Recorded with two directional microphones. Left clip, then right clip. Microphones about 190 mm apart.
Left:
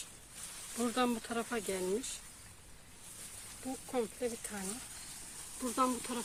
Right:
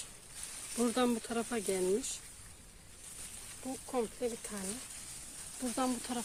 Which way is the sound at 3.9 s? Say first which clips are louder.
Right 1 dB; 20° right (ahead or behind).